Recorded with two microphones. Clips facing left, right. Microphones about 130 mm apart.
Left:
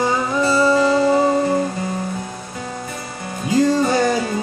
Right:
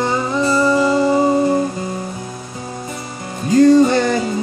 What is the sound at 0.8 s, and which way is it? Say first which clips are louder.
Music: right 1 dB; 20° right (ahead or behind).